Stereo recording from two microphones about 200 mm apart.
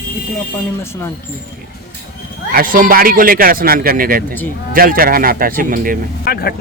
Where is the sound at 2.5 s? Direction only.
45° right (ahead or behind).